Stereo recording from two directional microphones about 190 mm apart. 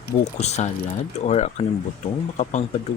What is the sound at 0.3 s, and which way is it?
Speech, 35° left (ahead or behind).